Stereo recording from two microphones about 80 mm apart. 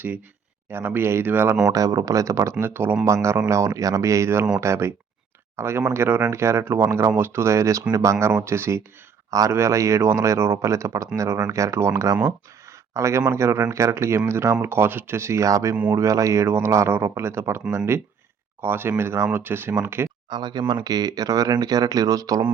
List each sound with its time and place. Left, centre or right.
0.7 s speech: right
1.6 s speech: right
15.7 s speech: right
16.0 s speech: right
20.3 s speech: right